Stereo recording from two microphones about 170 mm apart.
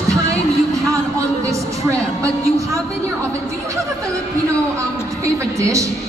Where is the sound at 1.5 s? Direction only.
20° right (ahead or behind).